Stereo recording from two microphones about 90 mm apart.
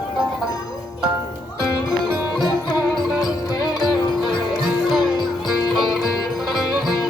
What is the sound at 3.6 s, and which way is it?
Music, 50° left (ahead or behind).